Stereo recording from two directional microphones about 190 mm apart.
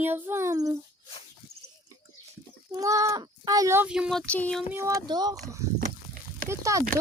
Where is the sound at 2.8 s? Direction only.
15° right (ahead or behind); by 4.6 s 5° left (ahead or behind).